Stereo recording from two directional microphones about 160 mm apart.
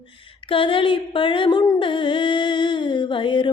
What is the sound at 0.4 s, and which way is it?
Female singing, 35° left (ahead or behind).